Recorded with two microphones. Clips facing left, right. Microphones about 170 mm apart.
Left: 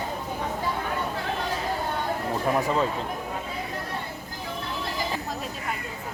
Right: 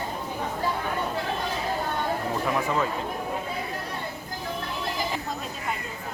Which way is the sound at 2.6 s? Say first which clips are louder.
Left 2 dB; 35° left (ahead or behind).